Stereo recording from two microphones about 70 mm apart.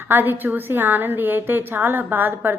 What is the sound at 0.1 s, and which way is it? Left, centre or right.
A woman's voice, right.